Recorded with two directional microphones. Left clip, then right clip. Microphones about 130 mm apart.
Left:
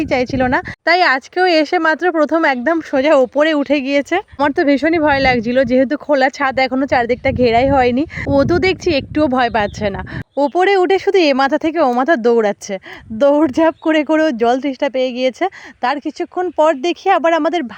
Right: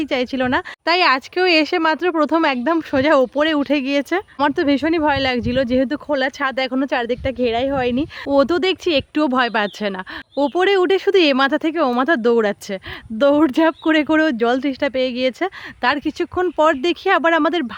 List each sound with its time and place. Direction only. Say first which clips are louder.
0.0 s speech: left 4 dB; 40° left (ahead or behind)
0.9 s speech: left 3 dB; 20° left (ahead or behind)
10.3 s speech: left 3 dB; 20° left (ahead or behind)
15.8 s speech: left 1 dB; 5° left (ahead or behind)